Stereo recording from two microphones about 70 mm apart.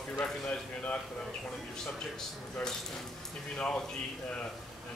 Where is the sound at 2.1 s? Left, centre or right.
Centre.